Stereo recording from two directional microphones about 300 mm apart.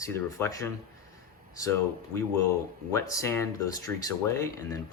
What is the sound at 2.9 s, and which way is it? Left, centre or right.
Speech, centre.